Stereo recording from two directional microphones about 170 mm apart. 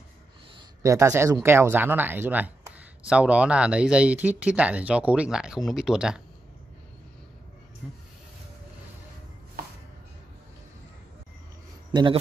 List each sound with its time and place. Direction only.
0.6 s speech: 20° right (ahead or behind)
7.8 s speech: 5° right (ahead or behind)
9.6 s chopping: 65° right (ahead or behind)
11.9 s speech: 25° right (ahead or behind)